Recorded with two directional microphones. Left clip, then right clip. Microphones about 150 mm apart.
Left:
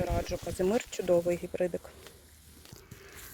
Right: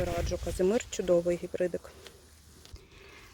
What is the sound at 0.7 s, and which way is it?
Speech, 5° right (ahead or behind).